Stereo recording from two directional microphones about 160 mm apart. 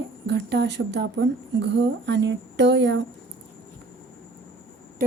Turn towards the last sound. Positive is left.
turn(degrees=-65)  # may be behind; listen again after turning